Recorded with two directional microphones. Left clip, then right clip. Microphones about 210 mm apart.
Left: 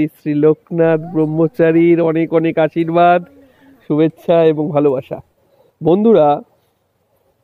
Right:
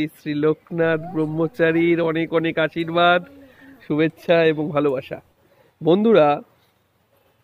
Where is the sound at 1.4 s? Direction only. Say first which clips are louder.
Left 6 dB; 35° left (ahead or behind).